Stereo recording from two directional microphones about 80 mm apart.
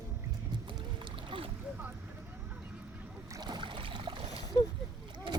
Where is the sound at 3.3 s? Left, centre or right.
Right.